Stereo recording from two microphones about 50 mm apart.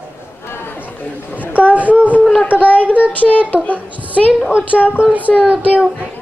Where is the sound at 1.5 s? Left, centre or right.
Right.